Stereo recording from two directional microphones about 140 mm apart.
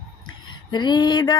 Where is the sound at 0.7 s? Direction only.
30° left (ahead or behind).